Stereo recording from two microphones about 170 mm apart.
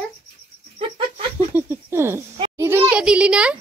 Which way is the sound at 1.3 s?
10° right (ahead or behind).